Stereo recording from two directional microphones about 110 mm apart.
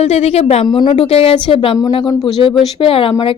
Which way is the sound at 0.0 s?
70° left (ahead or behind).